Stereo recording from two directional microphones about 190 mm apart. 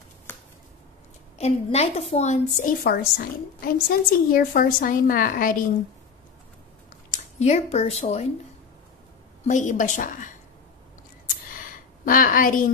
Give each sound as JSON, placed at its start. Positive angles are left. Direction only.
{"t": 1.4, "sound": "a woman's voice", "side_deg": 35}
{"t": 2.8, "sound": "a woman's voice", "side_deg": 55}
{"t": 7.1, "sound": "speech", "side_deg": 35}
{"t": 9.5, "sound": "a woman's voice", "side_deg": 40}
{"t": 11.5, "sound": "a sound", "side_deg": 45}